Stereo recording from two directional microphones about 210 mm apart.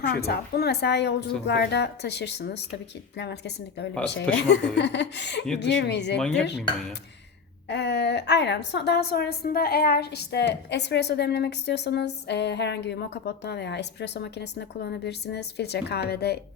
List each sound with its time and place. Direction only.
0.2 s a woman's voice: 50° left (ahead or behind)
6.1 s dishes: 5° left (ahead or behind)
7.7 s a woman's voice: 55° left (ahead or behind)